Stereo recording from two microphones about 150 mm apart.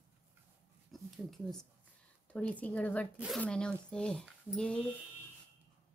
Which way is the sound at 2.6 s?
10° left (ahead or behind).